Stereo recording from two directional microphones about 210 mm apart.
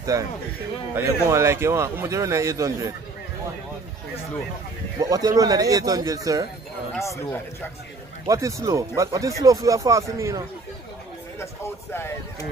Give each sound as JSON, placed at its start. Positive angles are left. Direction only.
{"t": 0.0, "sound": "speech", "side_deg": -15}
{"t": 5.0, "sound": "speech", "side_deg": -15}
{"t": 7.0, "sound": "speech", "side_deg": 15}
{"t": 8.3, "sound": "speech", "side_deg": -15}
{"t": 11.9, "sound": "speech", "side_deg": 10}